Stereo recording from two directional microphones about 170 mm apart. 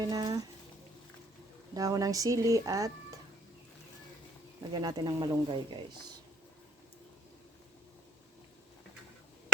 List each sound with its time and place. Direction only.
0.0 s speech: 20° right (ahead or behind)
1.7 s speech: 20° right (ahead or behind)
4.7 s speech: 25° right (ahead or behind)